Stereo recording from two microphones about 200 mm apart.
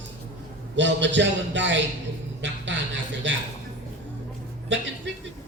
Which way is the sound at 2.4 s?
65° right (ahead or behind).